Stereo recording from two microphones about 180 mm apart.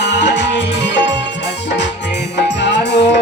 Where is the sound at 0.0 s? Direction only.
75° left (ahead or behind).